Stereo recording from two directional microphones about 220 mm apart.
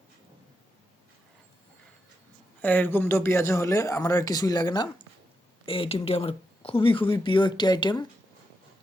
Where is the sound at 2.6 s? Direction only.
10° left (ahead or behind).